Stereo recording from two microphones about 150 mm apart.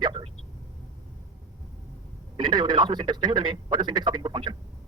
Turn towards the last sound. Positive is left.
turn(degrees=-30)  # may be behind; listen again after turning